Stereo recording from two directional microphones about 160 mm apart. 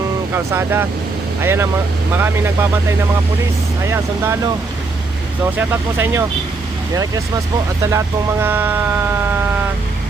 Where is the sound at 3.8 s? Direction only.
15° right (ahead or behind).